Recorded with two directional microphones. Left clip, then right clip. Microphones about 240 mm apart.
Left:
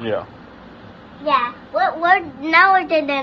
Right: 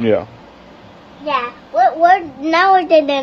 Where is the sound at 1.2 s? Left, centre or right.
Right.